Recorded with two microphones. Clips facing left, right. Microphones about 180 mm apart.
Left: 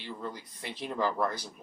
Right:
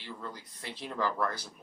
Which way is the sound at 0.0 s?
15° left (ahead or behind).